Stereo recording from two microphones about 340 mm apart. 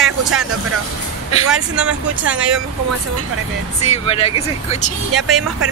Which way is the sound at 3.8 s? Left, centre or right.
Centre.